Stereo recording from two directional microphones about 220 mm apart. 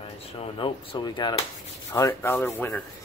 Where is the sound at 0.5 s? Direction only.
25° left (ahead or behind).